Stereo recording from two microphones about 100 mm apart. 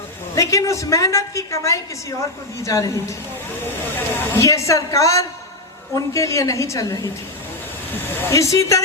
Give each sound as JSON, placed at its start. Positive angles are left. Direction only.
{"t": 0.3, "sound": "a woman's voice", "side_deg": 30}
{"t": 3.9, "sound": "a woman's voice", "side_deg": 20}
{"t": 8.3, "sound": "a woman's voice", "side_deg": 30}